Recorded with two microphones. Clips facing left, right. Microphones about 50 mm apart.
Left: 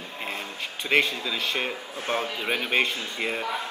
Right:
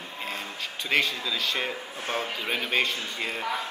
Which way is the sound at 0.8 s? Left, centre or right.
Left.